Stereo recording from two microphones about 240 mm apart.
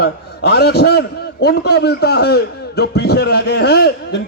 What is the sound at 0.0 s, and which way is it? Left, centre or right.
A man's voice, left.